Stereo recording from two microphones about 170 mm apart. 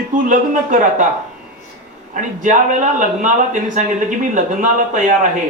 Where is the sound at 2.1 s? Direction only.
50° right (ahead or behind).